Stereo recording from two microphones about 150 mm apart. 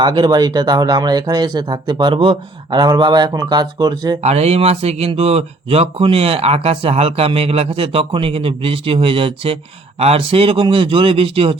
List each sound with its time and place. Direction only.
0.0 s speech: 30° right (ahead or behind)
4.2 s speech: 45° right (ahead or behind)